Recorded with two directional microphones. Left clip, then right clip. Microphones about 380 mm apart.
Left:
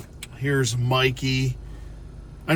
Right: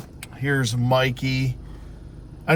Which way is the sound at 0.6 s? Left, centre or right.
Centre.